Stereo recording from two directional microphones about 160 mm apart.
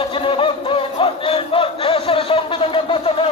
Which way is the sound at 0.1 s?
35° left (ahead or behind).